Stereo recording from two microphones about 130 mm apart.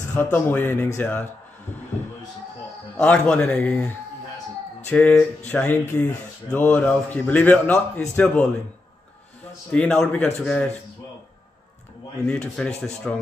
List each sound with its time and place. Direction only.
0.0 s speech: 15° left (ahead or behind)
3.0 s speech: 10° left (ahead or behind)
9.7 s speech: 10° left (ahead or behind)
12.3 s speech: 5° left (ahead or behind)